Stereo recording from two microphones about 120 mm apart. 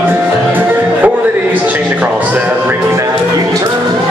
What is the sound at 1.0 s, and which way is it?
Music, 15° right (ahead or behind).